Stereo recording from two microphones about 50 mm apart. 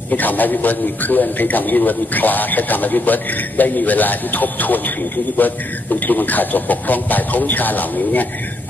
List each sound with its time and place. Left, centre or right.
0.1 s a man's voice: left